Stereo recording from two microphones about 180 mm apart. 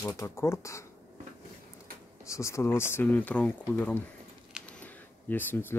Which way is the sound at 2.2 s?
15° left (ahead or behind).